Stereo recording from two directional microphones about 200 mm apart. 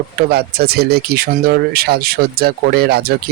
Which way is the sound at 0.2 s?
50° right (ahead or behind).